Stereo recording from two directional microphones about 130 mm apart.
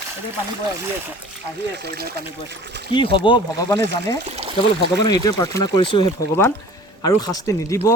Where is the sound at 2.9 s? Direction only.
40° left (ahead or behind).